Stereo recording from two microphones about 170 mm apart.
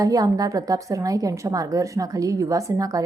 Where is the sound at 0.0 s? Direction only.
20° right (ahead or behind).